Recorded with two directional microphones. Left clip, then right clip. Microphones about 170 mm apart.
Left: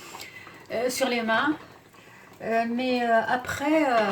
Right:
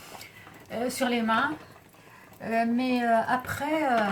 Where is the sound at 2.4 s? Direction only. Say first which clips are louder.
Left 1 dB; 10° left (ahead or behind).